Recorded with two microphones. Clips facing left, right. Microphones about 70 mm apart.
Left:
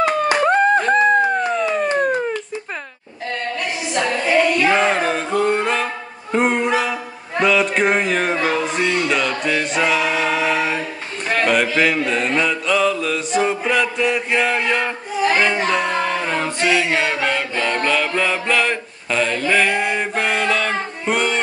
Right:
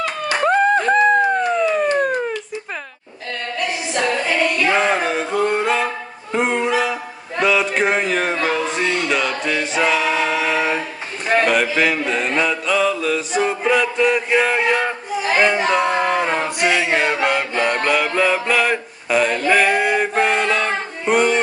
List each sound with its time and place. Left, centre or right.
0.5 s a sound: centre
4.6 s music: centre
6.3 s dog: centre
7.3 s music: centre
11.4 s mantra: centre
15.4 s speech: centre
15.9 s a sound: right
20.0 s mantra: centre